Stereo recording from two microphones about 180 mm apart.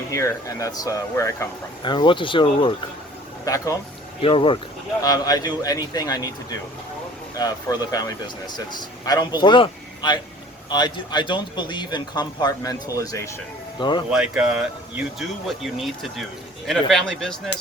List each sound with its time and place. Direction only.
0.1 s speech: 15° left (ahead or behind)
3.4 s speech: 20° left (ahead or behind)
4.2 s speech: 30° left (ahead or behind)
7.3 s speech: 20° left (ahead or behind)
14.1 s speech: 5° right (ahead or behind)